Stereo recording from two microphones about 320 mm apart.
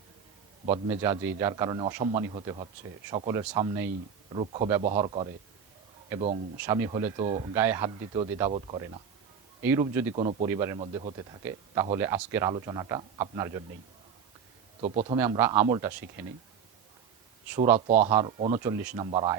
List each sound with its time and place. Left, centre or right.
0.9 s a man's voice: centre
6.6 s speech: centre
9.9 s speech: centre
14.8 s a man's voice: centre
15.2 s speech: centre
17.5 s speech: centre
17.7 s a man's voice: right